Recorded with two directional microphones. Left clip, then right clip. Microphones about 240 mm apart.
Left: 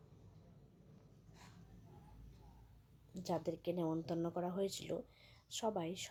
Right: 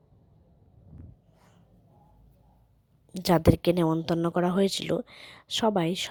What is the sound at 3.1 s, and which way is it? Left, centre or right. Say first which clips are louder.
A woman's voice: right 18 dB; right.